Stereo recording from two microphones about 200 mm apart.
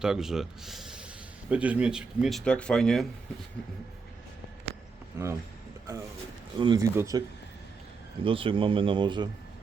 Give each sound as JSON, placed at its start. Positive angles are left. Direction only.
{"t": 0.0, "sound": "speech", "side_deg": 0}
{"t": 5.2, "sound": "speech", "side_deg": -15}
{"t": 6.6, "sound": "speech", "side_deg": -20}
{"t": 8.2, "sound": "speech", "side_deg": -25}